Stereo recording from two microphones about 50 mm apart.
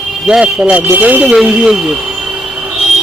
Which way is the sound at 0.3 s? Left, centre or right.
Centre.